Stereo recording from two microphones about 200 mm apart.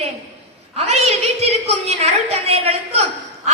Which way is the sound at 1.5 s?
35° right (ahead or behind).